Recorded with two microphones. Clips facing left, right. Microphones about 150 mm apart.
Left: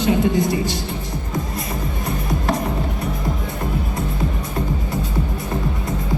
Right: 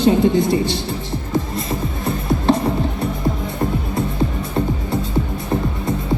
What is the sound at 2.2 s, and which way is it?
Music, 30° right (ahead or behind).